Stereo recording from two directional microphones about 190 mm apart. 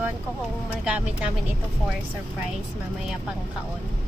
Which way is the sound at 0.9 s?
5° right (ahead or behind).